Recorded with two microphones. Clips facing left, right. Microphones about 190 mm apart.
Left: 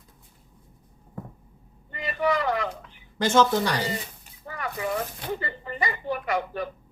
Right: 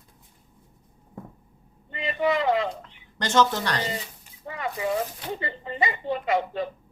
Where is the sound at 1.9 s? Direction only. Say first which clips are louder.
Right 1 dB; 20° right (ahead or behind).